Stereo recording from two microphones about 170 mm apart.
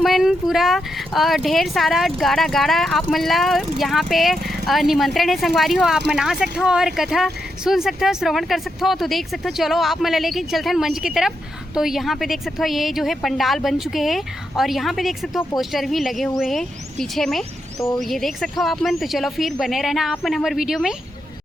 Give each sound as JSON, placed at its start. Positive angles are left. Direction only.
{"t": 0.0, "sound": "speech", "side_deg": 0}
{"t": 17.7, "sound": "speech", "side_deg": 20}
{"t": 18.0, "sound": "speech", "side_deg": 0}